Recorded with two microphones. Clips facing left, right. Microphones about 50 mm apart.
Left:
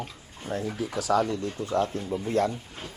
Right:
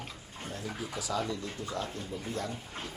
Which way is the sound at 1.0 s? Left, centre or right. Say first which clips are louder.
Left 10 dB; left.